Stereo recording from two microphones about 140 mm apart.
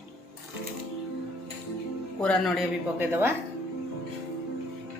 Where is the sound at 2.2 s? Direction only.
5° left (ahead or behind).